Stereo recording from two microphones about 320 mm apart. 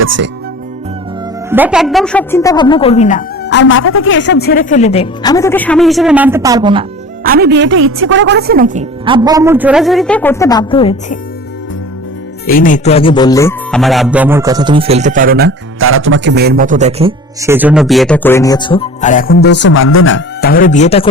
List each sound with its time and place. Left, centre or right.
0.0 s speech: right
1.5 s a woman's voice: centre
7.3 s a woman's voice: right; by 11.2 s centre
12.5 s speech: left